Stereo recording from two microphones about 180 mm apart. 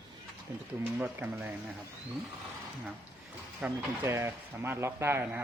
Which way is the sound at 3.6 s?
10° right (ahead or behind).